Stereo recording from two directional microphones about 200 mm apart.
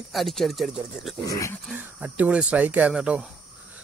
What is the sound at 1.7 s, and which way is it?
Speech, 10° right (ahead or behind).